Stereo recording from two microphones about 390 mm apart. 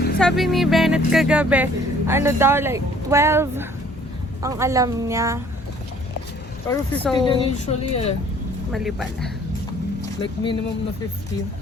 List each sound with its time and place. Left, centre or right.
0.2 s a woman's voice: centre
6.7 s speech: centre
7.5 s speech: centre
8.7 s speech: centre
10.0 s speech: centre